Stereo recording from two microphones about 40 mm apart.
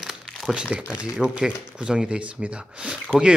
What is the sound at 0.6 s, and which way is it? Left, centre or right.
Speech, right.